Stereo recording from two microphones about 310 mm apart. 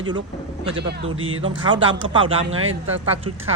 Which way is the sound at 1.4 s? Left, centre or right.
Centre.